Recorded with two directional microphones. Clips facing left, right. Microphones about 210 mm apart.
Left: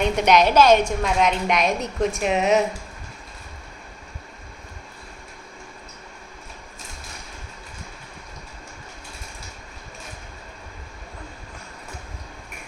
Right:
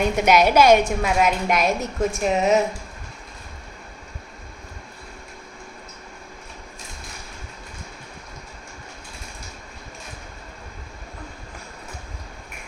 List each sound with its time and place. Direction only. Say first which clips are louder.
0.0 s a woman's voice: even; 5° right (ahead or behind)